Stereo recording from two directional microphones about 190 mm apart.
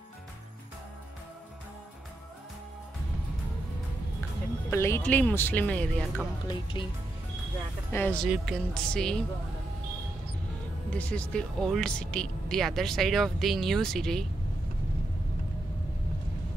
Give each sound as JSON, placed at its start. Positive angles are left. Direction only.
{"t": 4.6, "sound": "speech", "side_deg": 15}
{"t": 6.4, "sound": "speech", "side_deg": 25}
{"t": 7.9, "sound": "speech", "side_deg": 10}
{"t": 10.9, "sound": "speech", "side_deg": 5}